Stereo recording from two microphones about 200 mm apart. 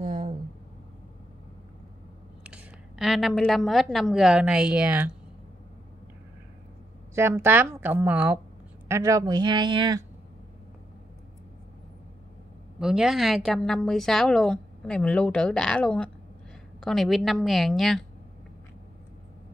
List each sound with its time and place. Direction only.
0.0 s a sound: 35° right (ahead or behind)
2.4 s a woman's voice: 5° right (ahead or behind)
7.2 s a woman's voice: 10° right (ahead or behind)
12.7 s a woman's voice: 5° right (ahead or behind)